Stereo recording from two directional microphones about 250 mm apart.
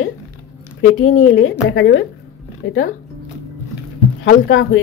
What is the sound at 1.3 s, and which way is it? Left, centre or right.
Speech, left.